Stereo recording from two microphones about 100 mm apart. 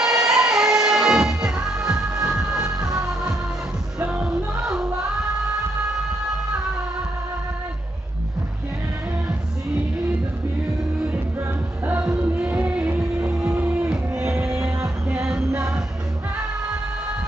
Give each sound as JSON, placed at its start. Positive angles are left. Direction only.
{"t": 0.0, "sound": "music", "side_deg": -5}
{"t": 4.3, "sound": "music", "side_deg": -5}
{"t": 11.3, "sound": "music", "side_deg": -20}
{"t": 14.2, "sound": "music", "side_deg": -25}
{"t": 15.2, "sound": "music", "side_deg": -5}